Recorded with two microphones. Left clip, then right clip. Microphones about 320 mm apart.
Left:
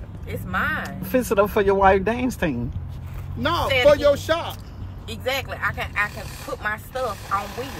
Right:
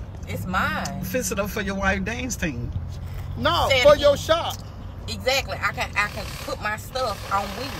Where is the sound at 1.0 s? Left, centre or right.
Centre.